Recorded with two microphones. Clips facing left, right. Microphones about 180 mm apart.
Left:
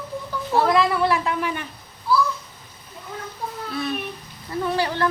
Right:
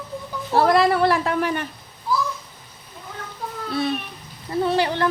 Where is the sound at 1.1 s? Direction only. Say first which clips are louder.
Right 2 dB; 45° right (ahead or behind).